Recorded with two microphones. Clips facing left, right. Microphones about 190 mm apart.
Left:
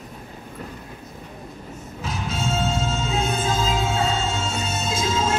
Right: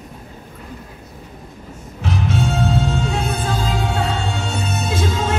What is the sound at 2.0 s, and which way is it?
Music, 65° right (ahead or behind).